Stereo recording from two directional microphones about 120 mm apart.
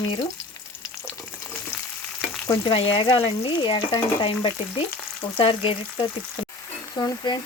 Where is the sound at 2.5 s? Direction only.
45° left (ahead or behind).